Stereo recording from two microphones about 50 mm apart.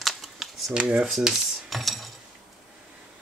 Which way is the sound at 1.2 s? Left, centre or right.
Centre.